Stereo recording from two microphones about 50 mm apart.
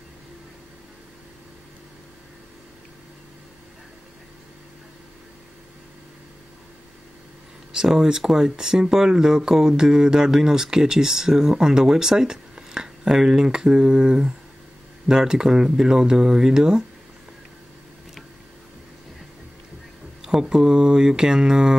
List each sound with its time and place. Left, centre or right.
7.7 s speech: centre
20.2 s speech: centre